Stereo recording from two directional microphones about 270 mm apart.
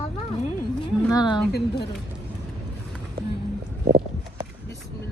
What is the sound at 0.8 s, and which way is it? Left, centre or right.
Speech, centre.